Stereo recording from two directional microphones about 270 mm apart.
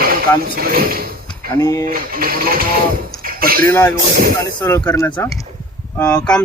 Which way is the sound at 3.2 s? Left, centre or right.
Right.